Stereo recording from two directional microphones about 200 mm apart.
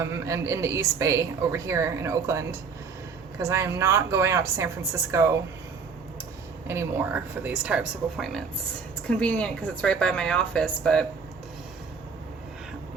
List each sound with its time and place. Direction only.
0.0 s a woman's voice: 15° right (ahead or behind)
6.7 s a woman's voice: 10° right (ahead or behind); by 11.0 s 5° left (ahead or behind)